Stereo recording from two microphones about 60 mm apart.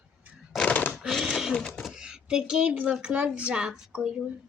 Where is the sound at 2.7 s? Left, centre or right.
Right.